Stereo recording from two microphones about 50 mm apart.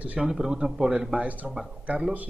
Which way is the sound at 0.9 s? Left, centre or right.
Right.